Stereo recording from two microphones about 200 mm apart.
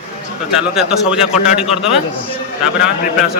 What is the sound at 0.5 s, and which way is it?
Speech, 5° right (ahead or behind).